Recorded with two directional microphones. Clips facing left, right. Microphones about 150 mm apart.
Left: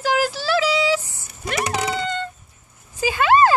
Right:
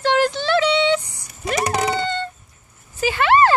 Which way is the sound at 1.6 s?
35° right (ahead or behind).